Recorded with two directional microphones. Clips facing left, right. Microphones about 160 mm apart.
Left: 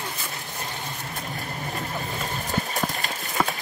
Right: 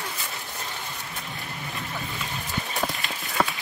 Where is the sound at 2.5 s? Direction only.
40° left (ahead or behind).